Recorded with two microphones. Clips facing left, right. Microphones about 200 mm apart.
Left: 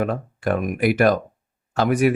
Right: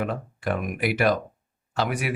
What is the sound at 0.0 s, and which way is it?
Speech, 50° left (ahead or behind).